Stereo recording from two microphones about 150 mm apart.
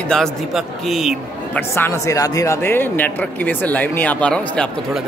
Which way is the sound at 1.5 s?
15° left (ahead or behind).